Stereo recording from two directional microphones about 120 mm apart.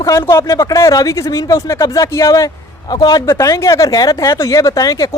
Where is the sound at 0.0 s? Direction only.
25° left (ahead or behind).